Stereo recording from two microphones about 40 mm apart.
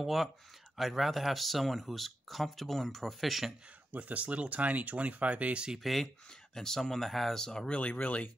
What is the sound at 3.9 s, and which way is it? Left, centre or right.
Speech, right.